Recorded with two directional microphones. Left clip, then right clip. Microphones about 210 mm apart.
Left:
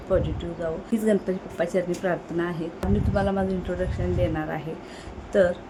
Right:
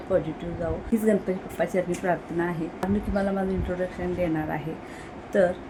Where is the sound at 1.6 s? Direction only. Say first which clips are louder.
Left 1 dB; centre (ahead or behind).